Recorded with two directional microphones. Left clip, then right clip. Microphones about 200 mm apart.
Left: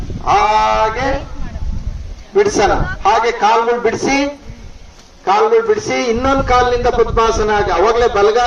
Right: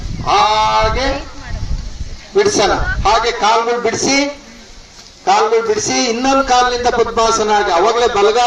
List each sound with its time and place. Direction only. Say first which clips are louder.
0.3 s a man's voice: even; 30° right (ahead or behind)
2.3 s a man's voice: even; 35° right (ahead or behind); by 8.4 s 55° right (ahead or behind)